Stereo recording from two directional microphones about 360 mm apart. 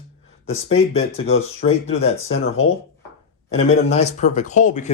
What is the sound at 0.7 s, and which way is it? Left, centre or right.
Speech, left.